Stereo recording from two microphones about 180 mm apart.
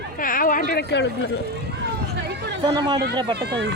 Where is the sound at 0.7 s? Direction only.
70° left (ahead or behind).